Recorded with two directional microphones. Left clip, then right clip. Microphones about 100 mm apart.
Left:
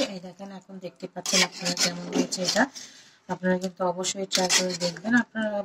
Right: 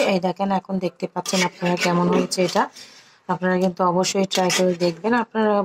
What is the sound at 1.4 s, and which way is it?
Speech, 30° right (ahead or behind).